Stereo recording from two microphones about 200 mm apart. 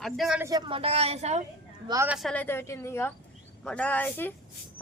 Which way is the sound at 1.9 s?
15° right (ahead or behind).